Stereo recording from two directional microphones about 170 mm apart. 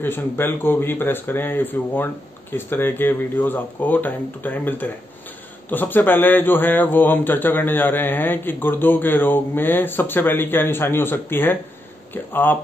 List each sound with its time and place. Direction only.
0.0 s speech: 10° left (ahead or behind)